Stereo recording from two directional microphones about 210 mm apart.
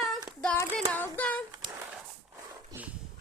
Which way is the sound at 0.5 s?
15° left (ahead or behind).